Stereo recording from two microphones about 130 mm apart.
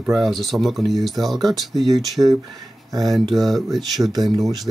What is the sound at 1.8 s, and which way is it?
Speech, 30° right (ahead or behind).